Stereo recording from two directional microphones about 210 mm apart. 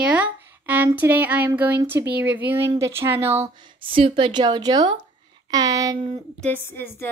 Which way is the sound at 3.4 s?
20° right (ahead or behind).